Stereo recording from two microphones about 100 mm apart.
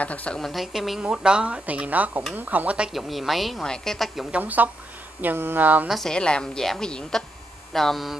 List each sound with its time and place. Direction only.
0.0 s a woman's voice: 15° left (ahead or behind)
0.4 s speech: centre (ahead or behind)
2.9 s speech: centre (ahead or behind)
4.3 s speech: 15° right (ahead or behind)
5.9 s speech: 5° left (ahead or behind)